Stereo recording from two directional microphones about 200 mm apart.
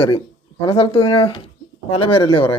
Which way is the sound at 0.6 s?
25° left (ahead or behind).